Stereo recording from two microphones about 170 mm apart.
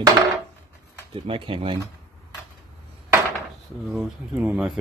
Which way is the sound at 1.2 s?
30° right (ahead or behind).